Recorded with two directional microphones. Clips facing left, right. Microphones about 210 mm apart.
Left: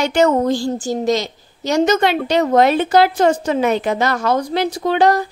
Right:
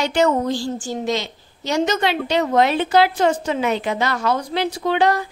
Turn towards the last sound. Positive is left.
turn(degrees=40)  # may be behind; listen again after turning